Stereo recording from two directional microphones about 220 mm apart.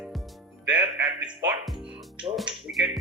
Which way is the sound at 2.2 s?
5° right (ahead or behind).